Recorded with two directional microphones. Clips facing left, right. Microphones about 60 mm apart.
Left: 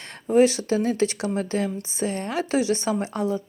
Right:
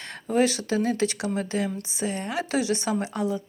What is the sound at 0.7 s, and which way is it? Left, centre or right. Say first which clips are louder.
Speech: left 1 dB; right.